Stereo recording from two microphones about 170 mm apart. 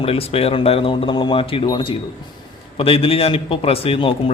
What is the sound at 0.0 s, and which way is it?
A man's voice, 35° left (ahead or behind).